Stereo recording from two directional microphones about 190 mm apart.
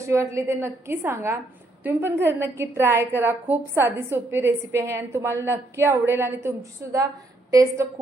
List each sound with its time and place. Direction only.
0.0 s a woman's voice: 15° right (ahead or behind)